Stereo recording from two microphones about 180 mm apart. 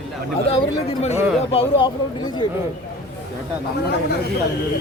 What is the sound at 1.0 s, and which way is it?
Speech, 35° left (ahead or behind).